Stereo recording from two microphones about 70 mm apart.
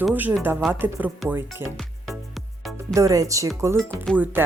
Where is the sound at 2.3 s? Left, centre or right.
Centre.